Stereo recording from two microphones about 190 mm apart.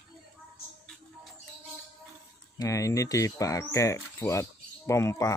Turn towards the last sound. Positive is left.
turn(degrees=15)  # may be behind; listen again after turning